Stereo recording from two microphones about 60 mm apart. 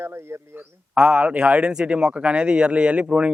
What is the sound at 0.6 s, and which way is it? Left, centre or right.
A man's voice, right.